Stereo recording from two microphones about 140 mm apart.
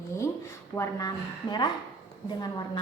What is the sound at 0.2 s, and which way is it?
A woman's voice, 20° left (ahead or behind).